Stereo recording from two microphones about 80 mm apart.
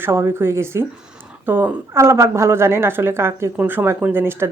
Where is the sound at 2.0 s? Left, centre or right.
Right.